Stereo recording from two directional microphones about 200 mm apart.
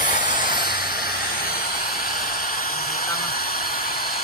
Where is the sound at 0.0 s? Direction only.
40° left (ahead or behind).